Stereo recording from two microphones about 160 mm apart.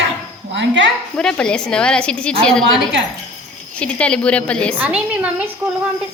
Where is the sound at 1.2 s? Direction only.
5° left (ahead or behind).